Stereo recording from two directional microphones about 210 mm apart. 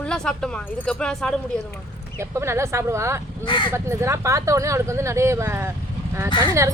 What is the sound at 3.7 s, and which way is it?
Speech, 10° right (ahead or behind).